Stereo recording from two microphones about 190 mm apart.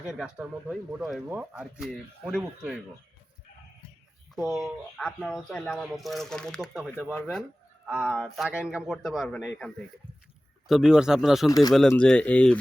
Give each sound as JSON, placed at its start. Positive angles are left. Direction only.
{"t": 0.1, "sound": "speech", "side_deg": 0}
{"t": 4.4, "sound": "speech", "side_deg": 0}
{"t": 10.7, "sound": "speech", "side_deg": 0}
{"t": 11.4, "sound": "speech", "side_deg": 20}
{"t": 11.7, "sound": "speech", "side_deg": 5}